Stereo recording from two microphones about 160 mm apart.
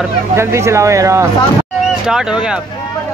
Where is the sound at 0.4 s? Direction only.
15° right (ahead or behind).